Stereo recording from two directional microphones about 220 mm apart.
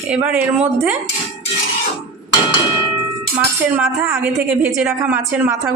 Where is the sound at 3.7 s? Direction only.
10° right (ahead or behind).